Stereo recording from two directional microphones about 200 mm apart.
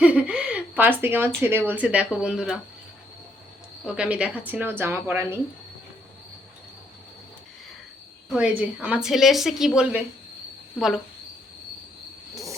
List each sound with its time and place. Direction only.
0.0 s a sound: 5° right (ahead or behind)
1.4 s a woman's voice: 10° right (ahead or behind)
3.8 s a woman's voice: 5° right (ahead or behind)
8.3 s a woman's voice: 5° right (ahead or behind)
12.3 s train: 15° right (ahead or behind)